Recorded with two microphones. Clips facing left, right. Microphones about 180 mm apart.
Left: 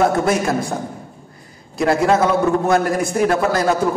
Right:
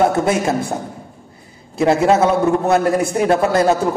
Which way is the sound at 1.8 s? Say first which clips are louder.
Right 2 dB; 25° right (ahead or behind).